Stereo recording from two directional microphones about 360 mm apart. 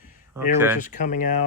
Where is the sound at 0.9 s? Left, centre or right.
Left.